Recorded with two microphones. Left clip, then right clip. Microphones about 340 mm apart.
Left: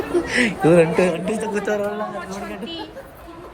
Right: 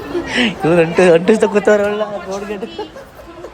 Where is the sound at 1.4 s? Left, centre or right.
Centre.